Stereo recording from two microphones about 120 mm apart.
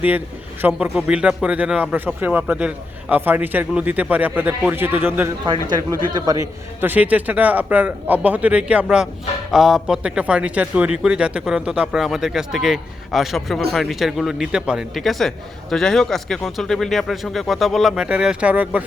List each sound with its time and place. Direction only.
0.8 s a man's voice: 10° right (ahead or behind)
5.7 s a man's voice: 30° right (ahead or behind)
6.8 s a man's voice: 15° right (ahead or behind)